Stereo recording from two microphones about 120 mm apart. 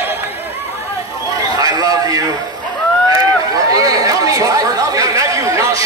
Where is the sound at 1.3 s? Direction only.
30° right (ahead or behind).